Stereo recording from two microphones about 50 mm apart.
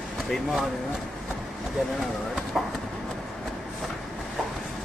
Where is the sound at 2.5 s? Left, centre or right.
Centre.